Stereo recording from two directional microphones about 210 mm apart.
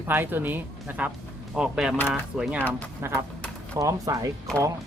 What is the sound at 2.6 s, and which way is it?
Speech, 10° left (ahead or behind).